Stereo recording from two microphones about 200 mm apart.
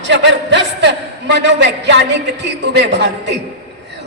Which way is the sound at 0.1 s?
60° right (ahead or behind).